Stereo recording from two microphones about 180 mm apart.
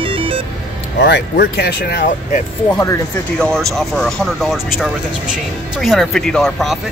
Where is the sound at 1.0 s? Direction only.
65° left (ahead or behind).